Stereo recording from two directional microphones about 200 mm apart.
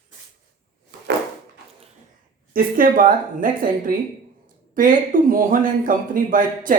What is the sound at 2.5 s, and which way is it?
A woman's voice, 45° right (ahead or behind).